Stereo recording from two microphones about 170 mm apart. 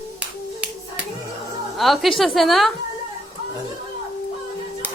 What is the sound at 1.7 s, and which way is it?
Speech, centre (ahead or behind).